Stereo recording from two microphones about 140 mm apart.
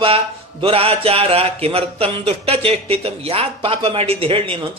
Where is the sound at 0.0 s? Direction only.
40° right (ahead or behind).